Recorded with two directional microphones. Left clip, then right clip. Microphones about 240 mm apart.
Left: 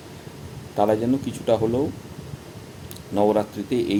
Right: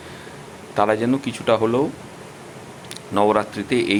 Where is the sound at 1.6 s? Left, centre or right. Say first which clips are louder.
Right 4 dB; centre.